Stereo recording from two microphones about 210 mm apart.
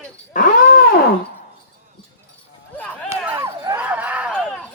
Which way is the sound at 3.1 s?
10° right (ahead or behind).